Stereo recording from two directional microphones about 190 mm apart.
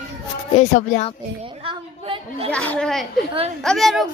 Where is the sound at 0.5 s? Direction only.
40° left (ahead or behind).